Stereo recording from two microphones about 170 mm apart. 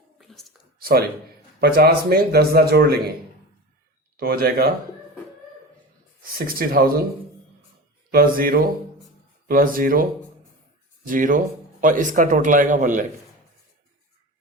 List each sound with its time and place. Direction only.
0.2 s a sound: centre (ahead or behind)
0.8 s speech: 60° right (ahead or behind)
4.2 s speech: 60° right (ahead or behind)
6.6 s speech: 60° right (ahead or behind)
8.1 s speech: 60° right (ahead or behind)
11.1 s a man's voice: 50° right (ahead or behind)